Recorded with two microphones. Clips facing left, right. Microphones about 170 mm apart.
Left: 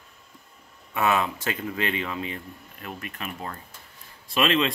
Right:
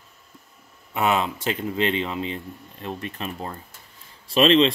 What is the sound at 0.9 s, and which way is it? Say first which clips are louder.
Speech: right 1 dB; 20° right (ahead or behind).